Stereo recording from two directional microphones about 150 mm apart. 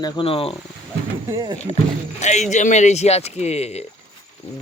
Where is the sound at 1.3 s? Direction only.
25° right (ahead or behind).